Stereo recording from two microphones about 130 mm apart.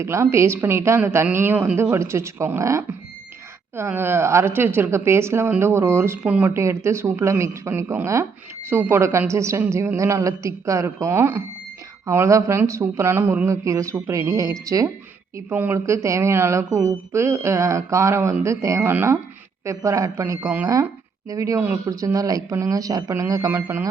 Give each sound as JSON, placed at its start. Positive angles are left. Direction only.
{"t": 0.0, "sound": "a woman's voice", "side_deg": -20}